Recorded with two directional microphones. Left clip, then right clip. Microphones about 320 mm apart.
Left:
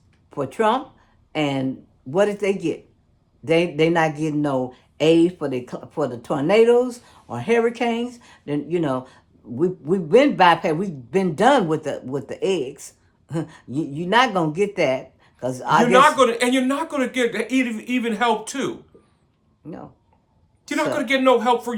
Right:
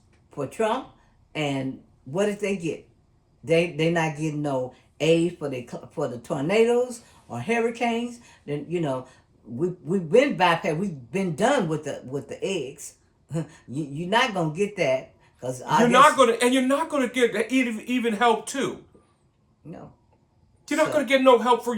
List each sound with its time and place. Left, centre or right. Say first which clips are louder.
0.3 s a man's voice: left 5 dB; left
15.9 s speech: left 1 dB; centre
20.7 s speech: even; centre